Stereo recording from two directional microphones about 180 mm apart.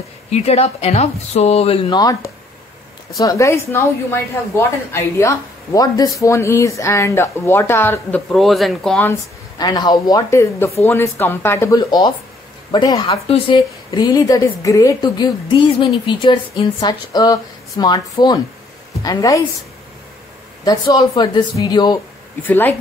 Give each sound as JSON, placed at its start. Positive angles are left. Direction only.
{"t": 0.3, "sound": "speech", "side_deg": 35}
{"t": 8.3, "sound": "speech", "side_deg": 0}
{"t": 9.6, "sound": "a woman's voice", "side_deg": 20}
{"t": 20.6, "sound": "a woman's voice", "side_deg": 25}
{"t": 22.5, "sound": "speech", "side_deg": 10}